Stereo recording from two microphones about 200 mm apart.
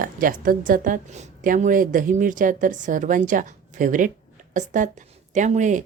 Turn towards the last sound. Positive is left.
turn(degrees=-40)  # may be behind; listen again after turning